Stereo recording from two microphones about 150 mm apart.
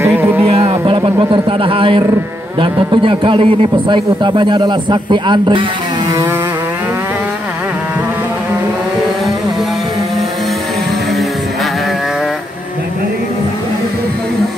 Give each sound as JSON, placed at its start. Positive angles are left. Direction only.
{"t": 0.0, "sound": "music", "side_deg": -10}
{"t": 0.4, "sound": "a sound", "side_deg": -40}
{"t": 2.6, "sound": "a man's voice", "side_deg": -35}